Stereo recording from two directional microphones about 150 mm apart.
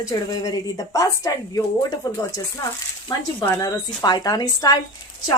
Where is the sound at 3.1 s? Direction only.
35° left (ahead or behind).